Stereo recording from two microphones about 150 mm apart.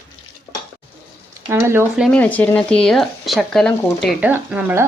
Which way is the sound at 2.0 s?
10° left (ahead or behind).